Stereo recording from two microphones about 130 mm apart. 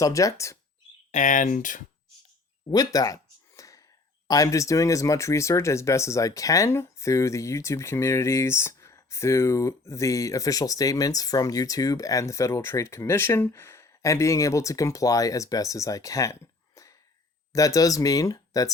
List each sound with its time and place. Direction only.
0.0 s speech: 25° left (ahead or behind)
1.1 s speech: 80° left
2.6 s a sound: 30° left (ahead or behind)
4.3 s speech: 25° left (ahead or behind)